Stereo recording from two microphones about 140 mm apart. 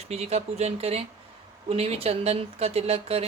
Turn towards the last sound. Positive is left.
turn(degrees=-45)  # may be behind; listen again after turning